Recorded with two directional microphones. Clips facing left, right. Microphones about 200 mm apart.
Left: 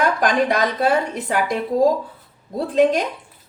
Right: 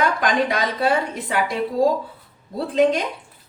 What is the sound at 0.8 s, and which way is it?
Speech, 45° left (ahead or behind).